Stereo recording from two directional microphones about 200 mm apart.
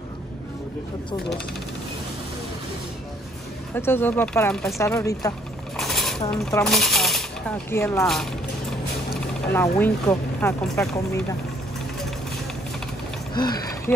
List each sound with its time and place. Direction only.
3.7 s speech: 10° left (ahead or behind)
5.8 s coin: centre (ahead or behind)
6.6 s speech: centre (ahead or behind)
9.5 s speech: 10° left (ahead or behind)
13.3 s speech: 20° left (ahead or behind)